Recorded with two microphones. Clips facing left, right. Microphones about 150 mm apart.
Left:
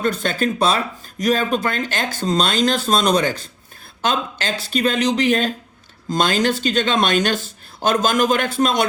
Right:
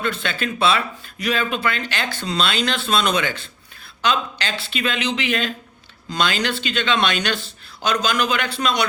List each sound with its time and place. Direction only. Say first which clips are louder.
0.0 s speech: left 5 dB; 40° left (ahead or behind)